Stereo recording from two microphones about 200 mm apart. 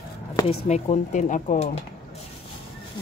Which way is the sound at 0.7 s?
35° left (ahead or behind).